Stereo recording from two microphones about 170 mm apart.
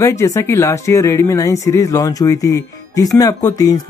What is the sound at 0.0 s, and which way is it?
Speech, 15° left (ahead or behind).